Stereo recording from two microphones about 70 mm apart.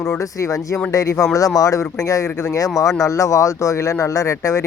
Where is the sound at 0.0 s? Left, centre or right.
Left.